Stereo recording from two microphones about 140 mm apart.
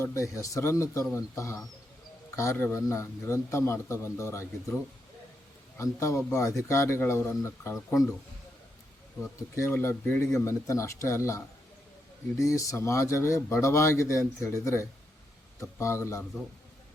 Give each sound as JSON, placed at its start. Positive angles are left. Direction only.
{"t": 0.0, "sound": "a man's voice", "side_deg": 20}
{"t": 5.7, "sound": "a man's voice", "side_deg": 20}
{"t": 9.6, "sound": "a man's voice", "side_deg": 20}